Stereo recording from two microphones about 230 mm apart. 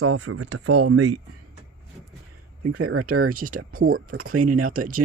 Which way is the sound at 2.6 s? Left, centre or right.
Right.